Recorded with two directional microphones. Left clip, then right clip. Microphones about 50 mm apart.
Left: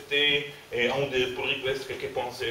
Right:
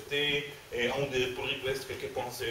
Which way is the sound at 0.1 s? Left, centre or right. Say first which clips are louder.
Left 6 dB; centre.